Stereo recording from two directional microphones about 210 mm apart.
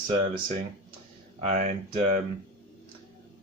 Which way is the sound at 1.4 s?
35° right (ahead or behind).